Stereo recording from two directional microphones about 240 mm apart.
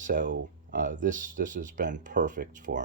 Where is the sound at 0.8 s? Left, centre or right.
Right.